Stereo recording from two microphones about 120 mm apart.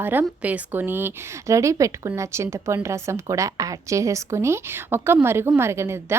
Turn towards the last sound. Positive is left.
turn(degrees=-20)  # may be behind; listen again after turning